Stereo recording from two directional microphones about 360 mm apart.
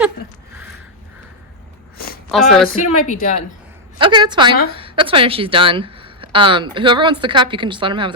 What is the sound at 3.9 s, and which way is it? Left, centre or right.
Speech, centre.